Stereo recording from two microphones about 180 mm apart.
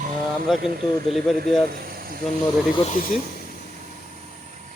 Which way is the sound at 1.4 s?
55° right (ahead or behind).